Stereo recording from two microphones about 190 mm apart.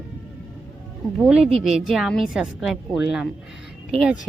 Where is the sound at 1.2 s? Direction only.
5° right (ahead or behind).